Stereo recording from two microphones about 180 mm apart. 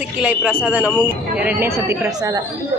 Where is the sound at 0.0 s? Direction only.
5° right (ahead or behind).